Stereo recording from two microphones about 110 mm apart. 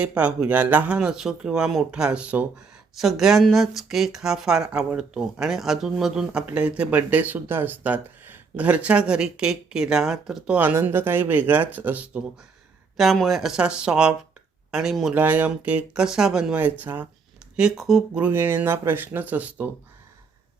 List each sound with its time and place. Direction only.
0.0 s speech: 10° right (ahead or behind)
13.0 s speech: centre (ahead or behind)
15.1 s speech: 15° right (ahead or behind)
17.6 s speech: 5° right (ahead or behind)